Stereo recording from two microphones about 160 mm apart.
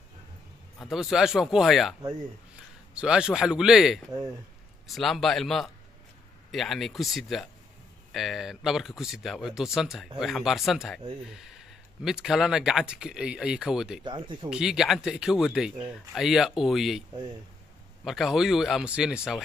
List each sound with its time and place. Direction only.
0.7 s speech: centre (ahead or behind)
12.0 s speech: 5° right (ahead or behind)
14.0 s speech: 30° right (ahead or behind)
14.5 s speech: 5° right (ahead or behind)
18.0 s speech: centre (ahead or behind)